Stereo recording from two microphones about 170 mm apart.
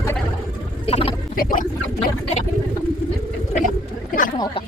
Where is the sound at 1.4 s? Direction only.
55° left (ahead or behind).